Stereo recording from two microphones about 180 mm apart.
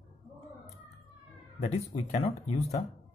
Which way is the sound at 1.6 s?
40° left (ahead or behind).